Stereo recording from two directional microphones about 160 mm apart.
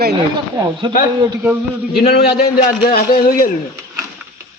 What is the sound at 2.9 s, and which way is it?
Speech, 65° left (ahead or behind).